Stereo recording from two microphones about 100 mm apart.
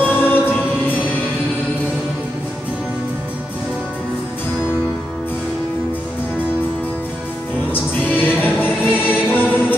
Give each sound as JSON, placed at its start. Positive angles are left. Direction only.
{"t": 0.1, "sound": "choir", "side_deg": 20}
{"t": 7.7, "sound": "choir", "side_deg": 20}
{"t": 9.3, "sound": "music", "side_deg": 20}